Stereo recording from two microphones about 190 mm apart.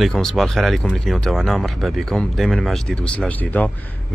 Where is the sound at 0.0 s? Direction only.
Centre (ahead or behind).